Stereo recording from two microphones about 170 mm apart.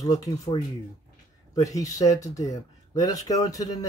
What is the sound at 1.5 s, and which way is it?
Speech, 20° left (ahead or behind).